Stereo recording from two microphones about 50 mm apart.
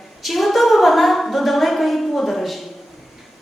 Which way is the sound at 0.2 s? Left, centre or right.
Centre.